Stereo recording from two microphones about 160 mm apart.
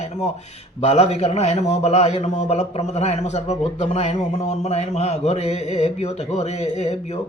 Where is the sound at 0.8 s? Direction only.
40° left (ahead or behind).